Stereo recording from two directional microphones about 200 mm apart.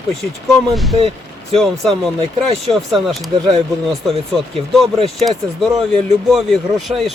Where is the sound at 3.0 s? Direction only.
Centre (ahead or behind).